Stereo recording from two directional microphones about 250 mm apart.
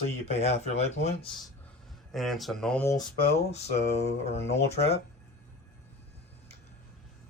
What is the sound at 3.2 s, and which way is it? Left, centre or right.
Speech, left.